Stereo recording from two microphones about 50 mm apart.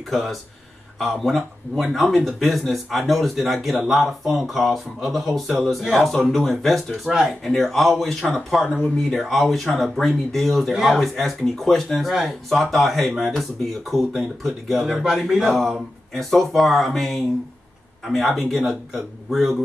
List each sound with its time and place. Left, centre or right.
0.1 s speech: centre
7.1 s speech: centre
7.4 s speech: centre
8.6 s speech: left
9.1 s speech: centre
10.7 s speech: centre
15.4 s speech: centre